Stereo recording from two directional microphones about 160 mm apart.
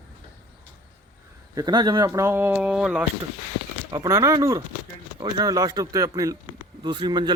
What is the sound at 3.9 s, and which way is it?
Speech, 20° right (ahead or behind).